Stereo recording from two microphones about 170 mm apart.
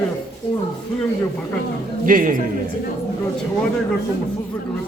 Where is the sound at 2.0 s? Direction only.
55° right (ahead or behind).